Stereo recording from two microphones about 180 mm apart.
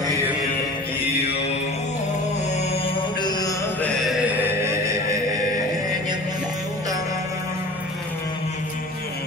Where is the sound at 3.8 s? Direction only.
Centre (ahead or behind); by 7.6 s 15° right (ahead or behind).